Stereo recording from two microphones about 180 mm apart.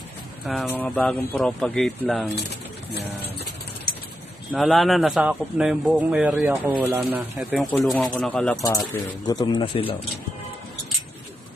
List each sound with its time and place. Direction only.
0.4 s a man's voice: centre (ahead or behind)
0.7 s a man's voice: 10° left (ahead or behind)
4.5 s a man's voice: centre (ahead or behind)
8.9 s speech: 20° left (ahead or behind)